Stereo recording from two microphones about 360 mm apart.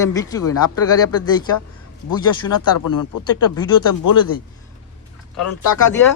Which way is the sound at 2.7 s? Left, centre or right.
Left.